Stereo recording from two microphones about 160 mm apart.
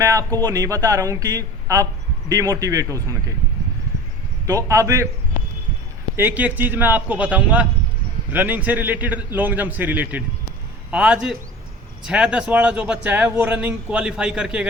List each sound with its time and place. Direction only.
0.0 s speech: 20° right (ahead or behind)
4.4 s speech: 20° right (ahead or behind)
6.1 s speech: 10° right (ahead or behind)